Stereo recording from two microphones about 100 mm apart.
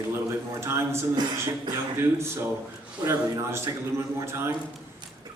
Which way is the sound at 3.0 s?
25° right (ahead or behind).